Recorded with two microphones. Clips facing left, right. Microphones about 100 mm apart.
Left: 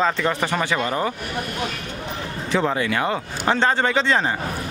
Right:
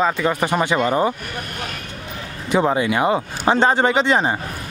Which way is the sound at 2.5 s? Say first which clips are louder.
Right 4 dB; 15° right (ahead or behind).